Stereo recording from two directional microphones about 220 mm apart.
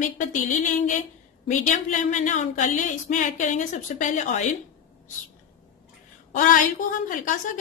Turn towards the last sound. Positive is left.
turn(degrees=35)  # may be behind; listen again after turning